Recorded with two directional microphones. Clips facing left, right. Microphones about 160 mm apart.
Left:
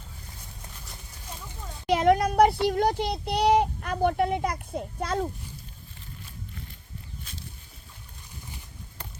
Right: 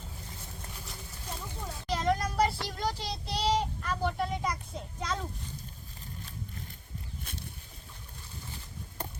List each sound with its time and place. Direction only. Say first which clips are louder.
1.9 s a sound: left 9 dB; 60° left (ahead or behind)
2.6 s speech: left 10 dB; 60° left (ahead or behind)
7.3 s boat: right 2 dB; 55° right (ahead or behind)